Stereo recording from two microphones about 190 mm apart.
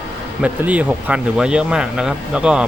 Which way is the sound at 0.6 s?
10° right (ahead or behind).